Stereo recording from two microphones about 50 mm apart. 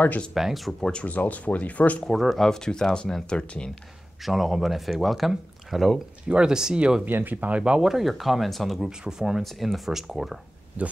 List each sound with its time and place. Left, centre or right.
0.3 s speech: centre
0.7 s speech: centre
1.0 s speech: left
2.0 s speech: centre
4.2 s speech: centre
6.2 s speech: centre
7.1 s speech: right
7.3 s speech: right
7.8 s speech: centre
9.0 s speech: centre
9.4 s speech: centre
10.8 s speech: right